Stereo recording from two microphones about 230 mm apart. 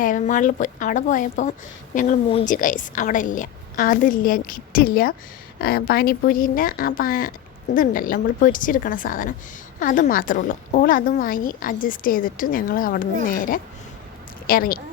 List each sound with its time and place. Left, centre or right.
0.0 s a woman's voice: left